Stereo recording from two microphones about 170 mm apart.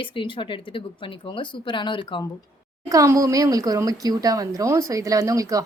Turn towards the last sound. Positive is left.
turn(degrees=-20)  # may be behind; listen again after turning